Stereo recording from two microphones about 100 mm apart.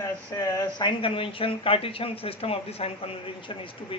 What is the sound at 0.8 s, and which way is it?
A woman's voice, 60° left (ahead or behind).